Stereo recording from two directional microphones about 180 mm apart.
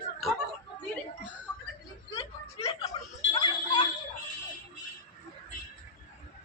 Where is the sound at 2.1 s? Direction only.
35° left (ahead or behind).